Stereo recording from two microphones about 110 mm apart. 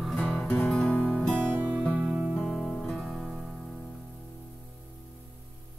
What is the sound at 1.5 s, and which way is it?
Music, 15° right (ahead or behind).